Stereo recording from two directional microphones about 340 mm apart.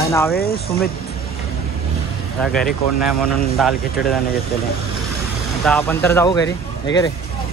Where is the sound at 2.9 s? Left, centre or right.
Centre.